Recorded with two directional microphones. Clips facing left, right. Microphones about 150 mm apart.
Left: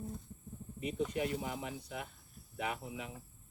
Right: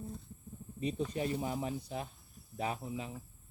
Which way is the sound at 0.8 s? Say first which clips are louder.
Even; 30° right (ahead or behind).